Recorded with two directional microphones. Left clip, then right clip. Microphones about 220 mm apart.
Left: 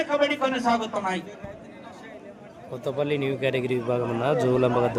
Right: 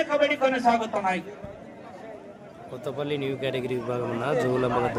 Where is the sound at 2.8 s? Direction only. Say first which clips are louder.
Left 3 dB; 20° left (ahead or behind).